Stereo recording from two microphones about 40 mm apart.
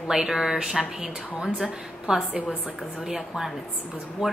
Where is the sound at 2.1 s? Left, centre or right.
Right.